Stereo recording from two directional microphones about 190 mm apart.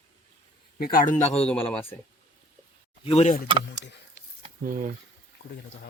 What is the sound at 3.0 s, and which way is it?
Speech, 35° left (ahead or behind).